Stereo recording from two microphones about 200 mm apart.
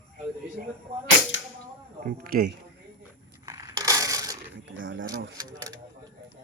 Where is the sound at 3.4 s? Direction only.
15° right (ahead or behind).